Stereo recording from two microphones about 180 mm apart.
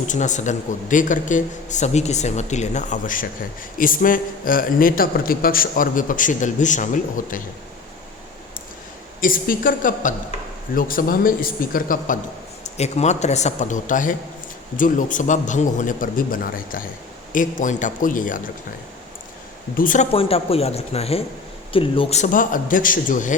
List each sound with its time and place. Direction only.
0.1 s a man's voice: 40° left (ahead or behind)
9.2 s a man's voice: 50° left (ahead or behind)
12.7 s a man's voice: 35° left (ahead or behind)
19.7 s a man's voice: 45° left (ahead or behind)
20.1 s a man's voice: 35° left (ahead or behind)